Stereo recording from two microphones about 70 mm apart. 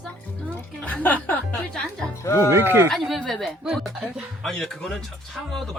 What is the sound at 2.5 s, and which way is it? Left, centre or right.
Speech, right.